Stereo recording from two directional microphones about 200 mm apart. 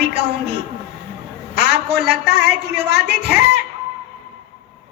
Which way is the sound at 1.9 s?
55° right (ahead or behind).